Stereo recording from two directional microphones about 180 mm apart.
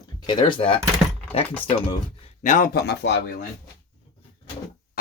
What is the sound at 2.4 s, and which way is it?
Speech, 50° left (ahead or behind).